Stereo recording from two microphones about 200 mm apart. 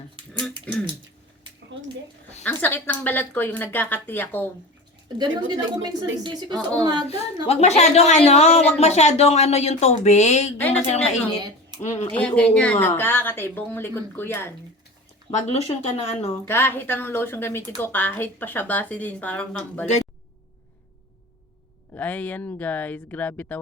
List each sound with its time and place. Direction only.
0.7 s speech: 5° left (ahead or behind)
1.7 s a sound: 65° right (ahead or behind)
2.4 s speech: 10° left (ahead or behind)
5.0 s a woman's voice: 20° right (ahead or behind)
7.4 s a woman's voice: 30° left (ahead or behind)
11.7 s speech: 20° right (ahead or behind)
12.1 s speech: 5° left (ahead or behind)
15.4 s a woman's voice: 30° left (ahead or behind)
16.5 s speech: 10° left (ahead or behind)
21.9 s speech: 10° left (ahead or behind)